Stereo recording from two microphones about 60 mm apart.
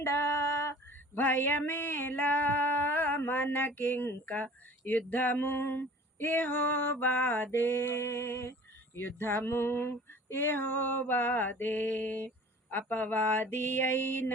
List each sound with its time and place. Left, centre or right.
0.0 s female singing: left
1.2 s a sound: left
3.8 s female singing: left